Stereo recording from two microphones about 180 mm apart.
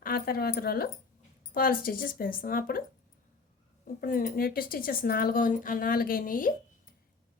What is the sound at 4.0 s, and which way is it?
A woman's voice, 50° left (ahead or behind).